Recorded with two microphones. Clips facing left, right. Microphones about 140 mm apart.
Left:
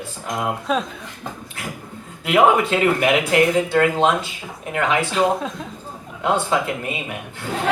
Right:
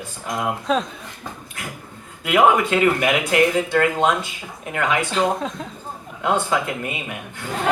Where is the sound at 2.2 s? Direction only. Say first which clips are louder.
Left 1 dB; 30° left (ahead or behind).